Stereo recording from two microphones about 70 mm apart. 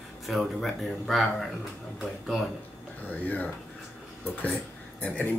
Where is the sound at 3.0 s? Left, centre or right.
Left.